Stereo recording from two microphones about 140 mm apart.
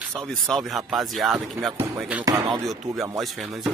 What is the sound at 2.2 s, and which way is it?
Speech, 30° right (ahead or behind).